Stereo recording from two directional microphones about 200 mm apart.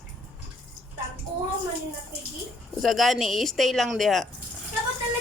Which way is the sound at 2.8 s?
Centre (ahead or behind).